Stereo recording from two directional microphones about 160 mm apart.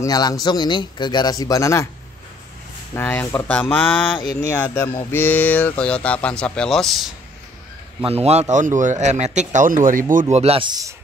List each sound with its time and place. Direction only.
0.0 s a man's voice: 20° left (ahead or behind)
2.9 s speech: 15° left (ahead or behind)
8.0 s a man's voice: 40° right (ahead or behind); by 10.2 s 55° right (ahead or behind)
10.3 s speech: 40° right (ahead or behind); by 11.0 s 25° right (ahead or behind)